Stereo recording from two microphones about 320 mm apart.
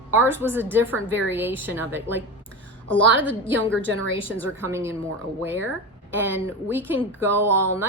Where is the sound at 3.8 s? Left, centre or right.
Right.